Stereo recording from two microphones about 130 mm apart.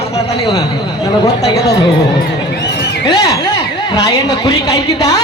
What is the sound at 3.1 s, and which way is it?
A man's voice, 25° left (ahead or behind).